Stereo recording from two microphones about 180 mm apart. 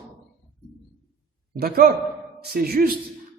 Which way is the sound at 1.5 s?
55° right (ahead or behind).